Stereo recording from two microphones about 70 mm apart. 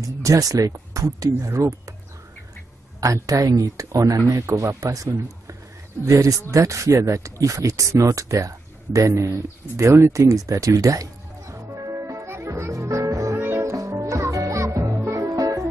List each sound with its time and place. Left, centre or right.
0.0 s speech: right
3.0 s speech: right
10.1 s music: right
13.4 s music: right
13.7 s music: right